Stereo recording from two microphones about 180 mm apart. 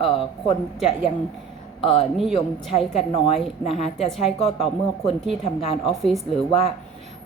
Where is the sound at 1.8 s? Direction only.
30° left (ahead or behind).